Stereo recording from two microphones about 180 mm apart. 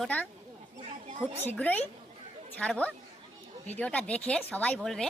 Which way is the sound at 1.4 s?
10° left (ahead or behind).